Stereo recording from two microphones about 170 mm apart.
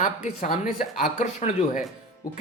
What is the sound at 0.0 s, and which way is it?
Speech, 45° left (ahead or behind).